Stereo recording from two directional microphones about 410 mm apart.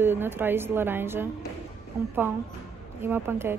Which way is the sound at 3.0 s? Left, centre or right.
Centre.